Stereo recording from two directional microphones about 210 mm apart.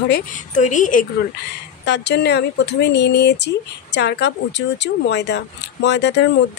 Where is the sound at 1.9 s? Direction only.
55° left (ahead or behind).